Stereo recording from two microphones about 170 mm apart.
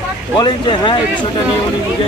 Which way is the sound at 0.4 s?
30° left (ahead or behind).